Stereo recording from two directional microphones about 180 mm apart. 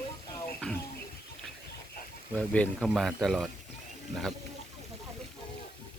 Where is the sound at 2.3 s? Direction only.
5° left (ahead or behind).